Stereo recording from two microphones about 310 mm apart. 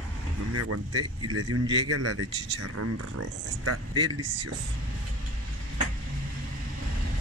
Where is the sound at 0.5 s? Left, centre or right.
Right.